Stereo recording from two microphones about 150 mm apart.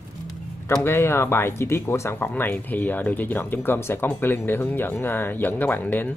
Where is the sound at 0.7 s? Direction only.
15° left (ahead or behind).